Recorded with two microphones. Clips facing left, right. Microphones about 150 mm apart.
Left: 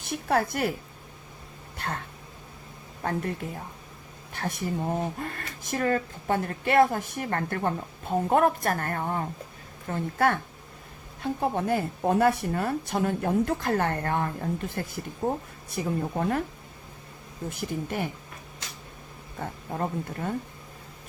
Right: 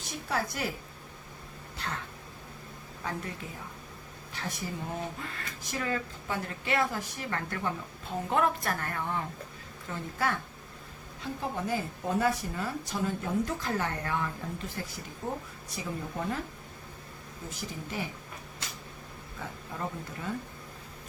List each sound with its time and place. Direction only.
0.0 s speech: 55° left (ahead or behind)
1.8 s speech: 55° left (ahead or behind)
3.0 s speech: 50° left (ahead or behind)
4.4 s speech: 55° left (ahead or behind)
15.7 s speech: 55° left (ahead or behind)
17.5 s speech: 55° left (ahead or behind)
19.4 s speech: 45° left (ahead or behind)